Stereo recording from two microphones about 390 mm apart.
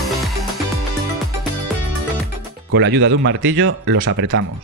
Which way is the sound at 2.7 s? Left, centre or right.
Right.